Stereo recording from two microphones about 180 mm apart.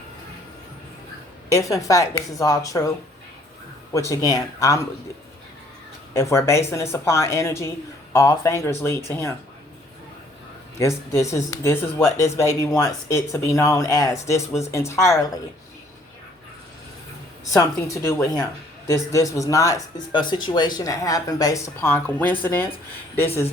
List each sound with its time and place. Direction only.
1.5 s speech: 20° left (ahead or behind)
3.9 s speech: 20° left (ahead or behind)
6.1 s speech: 15° left (ahead or behind)
10.8 s speech: 15° left (ahead or behind)
17.5 s speech: 15° left (ahead or behind)